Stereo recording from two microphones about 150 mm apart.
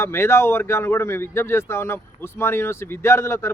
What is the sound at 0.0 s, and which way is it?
Speech, 15° left (ahead or behind).